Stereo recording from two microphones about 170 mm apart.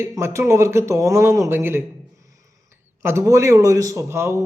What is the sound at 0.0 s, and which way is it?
A man's voice, 15° right (ahead or behind).